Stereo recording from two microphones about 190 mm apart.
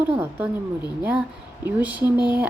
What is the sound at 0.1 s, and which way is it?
Speech, 10° right (ahead or behind).